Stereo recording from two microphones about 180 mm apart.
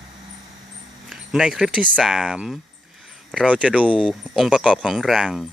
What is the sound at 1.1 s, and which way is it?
Speech, 5° right (ahead or behind).